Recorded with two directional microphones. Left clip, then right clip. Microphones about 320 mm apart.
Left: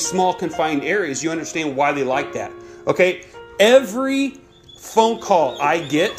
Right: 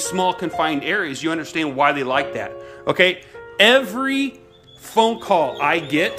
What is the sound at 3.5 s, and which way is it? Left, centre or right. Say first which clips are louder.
Speech: left 1 dB; centre.